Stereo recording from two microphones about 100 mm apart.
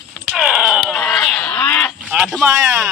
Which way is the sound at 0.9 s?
5° left (ahead or behind).